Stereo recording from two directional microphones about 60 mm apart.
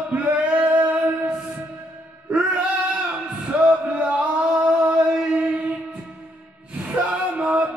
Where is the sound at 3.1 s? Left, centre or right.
Centre.